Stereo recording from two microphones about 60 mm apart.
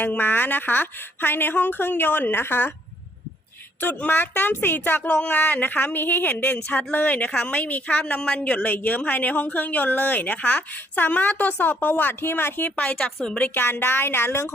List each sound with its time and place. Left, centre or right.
0.0 s speech: left
3.8 s a woman's voice: left
12.8 s a woman's voice: centre
13.4 s speech: left